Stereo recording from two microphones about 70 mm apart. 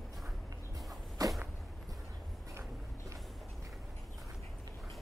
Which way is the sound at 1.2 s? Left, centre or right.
Right.